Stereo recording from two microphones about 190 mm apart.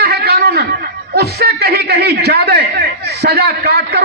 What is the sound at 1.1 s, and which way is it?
A man's voice, 55° right (ahead or behind).